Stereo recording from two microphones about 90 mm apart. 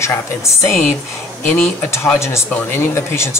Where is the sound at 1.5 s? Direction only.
20° left (ahead or behind).